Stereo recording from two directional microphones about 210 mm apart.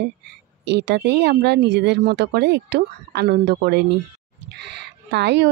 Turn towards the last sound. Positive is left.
turn(degrees=-55)  # may be behind; listen again after turning